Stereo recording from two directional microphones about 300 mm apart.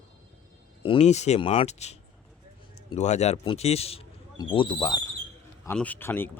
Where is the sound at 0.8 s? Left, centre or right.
Centre.